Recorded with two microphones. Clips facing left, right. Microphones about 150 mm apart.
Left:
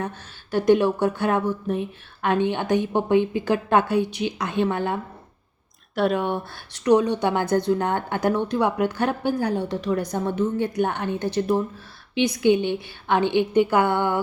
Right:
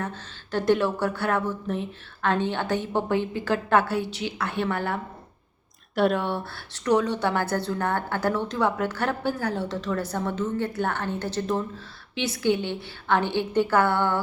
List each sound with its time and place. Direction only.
0.0 s a woman's voice: 15° left (ahead or behind)
5.9 s speech: centre (ahead or behind)
6.1 s a woman's voice: 15° left (ahead or behind)